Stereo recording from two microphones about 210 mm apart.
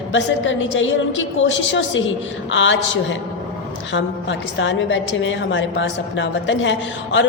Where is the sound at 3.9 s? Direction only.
60° left (ahead or behind).